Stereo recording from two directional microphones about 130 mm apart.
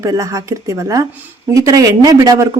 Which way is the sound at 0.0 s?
25° right (ahead or behind).